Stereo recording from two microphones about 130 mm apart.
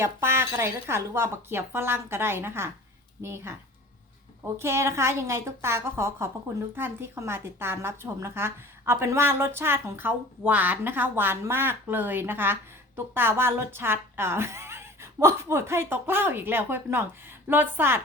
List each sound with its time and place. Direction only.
0.0 s speech: 20° right (ahead or behind)
4.6 s a woman's voice: 20° right (ahead or behind)